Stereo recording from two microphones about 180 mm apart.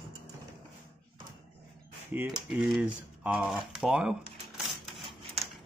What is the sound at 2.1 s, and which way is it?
Speech, 10° right (ahead or behind).